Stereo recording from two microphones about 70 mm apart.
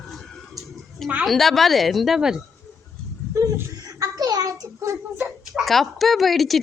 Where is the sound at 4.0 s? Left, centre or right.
Right.